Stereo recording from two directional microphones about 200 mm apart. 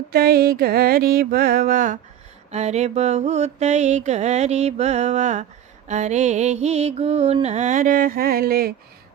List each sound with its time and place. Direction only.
0.1 s mantra: 50° right (ahead or behind)